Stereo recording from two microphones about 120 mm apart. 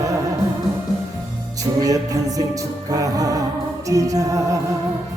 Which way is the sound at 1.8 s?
30° right (ahead or behind).